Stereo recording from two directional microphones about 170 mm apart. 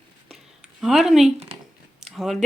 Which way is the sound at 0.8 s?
Centre (ahead or behind).